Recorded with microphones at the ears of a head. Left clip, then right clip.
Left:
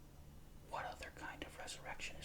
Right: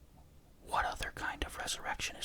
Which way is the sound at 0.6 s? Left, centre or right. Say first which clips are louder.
Right 12 dB; right.